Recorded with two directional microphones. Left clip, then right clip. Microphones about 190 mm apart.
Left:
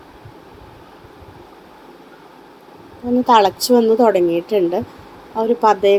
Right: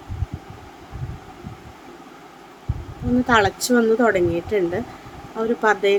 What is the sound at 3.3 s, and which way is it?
Speech, 10° left (ahead or behind).